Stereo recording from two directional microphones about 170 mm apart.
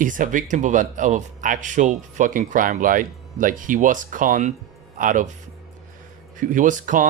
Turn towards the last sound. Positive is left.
turn(degrees=-50)  # may be behind; listen again after turning